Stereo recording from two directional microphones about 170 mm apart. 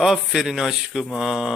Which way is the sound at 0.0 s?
Centre (ahead or behind).